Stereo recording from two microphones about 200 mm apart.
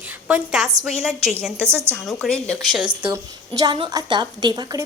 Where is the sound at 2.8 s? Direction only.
25° right (ahead or behind).